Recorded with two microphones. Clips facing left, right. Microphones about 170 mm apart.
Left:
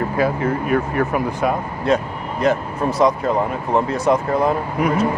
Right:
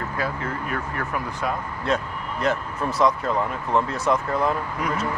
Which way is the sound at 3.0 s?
40° left (ahead or behind).